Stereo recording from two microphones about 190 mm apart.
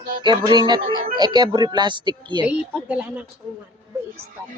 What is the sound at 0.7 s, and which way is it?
Speech, 30° right (ahead or behind).